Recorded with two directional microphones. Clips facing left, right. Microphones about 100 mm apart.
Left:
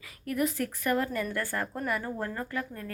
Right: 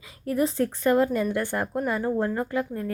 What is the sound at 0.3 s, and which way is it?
Speech, 30° right (ahead or behind).